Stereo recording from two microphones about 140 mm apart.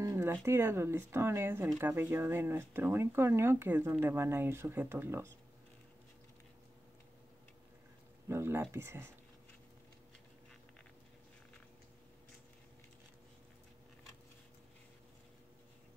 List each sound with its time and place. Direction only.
0.0 s speech: 20° right (ahead or behind)
8.3 s speech: 20° right (ahead or behind)